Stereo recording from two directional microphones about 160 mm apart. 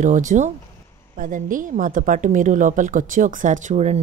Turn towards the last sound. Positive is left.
turn(degrees=-45)  # may be behind; listen again after turning